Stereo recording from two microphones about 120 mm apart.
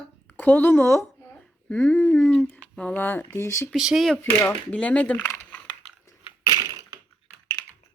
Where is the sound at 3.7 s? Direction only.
5° right (ahead or behind).